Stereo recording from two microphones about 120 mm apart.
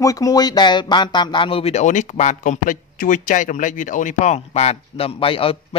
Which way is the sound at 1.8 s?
90° left.